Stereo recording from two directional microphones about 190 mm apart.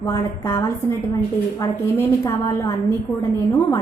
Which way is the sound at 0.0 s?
15° left (ahead or behind).